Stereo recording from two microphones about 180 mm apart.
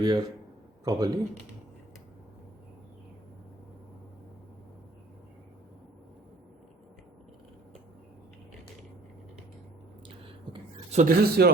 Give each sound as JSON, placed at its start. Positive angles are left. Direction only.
{"t": 0.0, "sound": "speech", "side_deg": -20}
{"t": 10.5, "sound": "a sound", "side_deg": -25}
{"t": 10.9, "sound": "speech", "side_deg": -55}